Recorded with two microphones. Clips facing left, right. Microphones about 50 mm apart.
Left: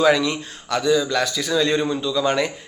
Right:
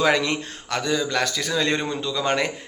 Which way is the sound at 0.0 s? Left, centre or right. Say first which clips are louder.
Left 3 dB; right.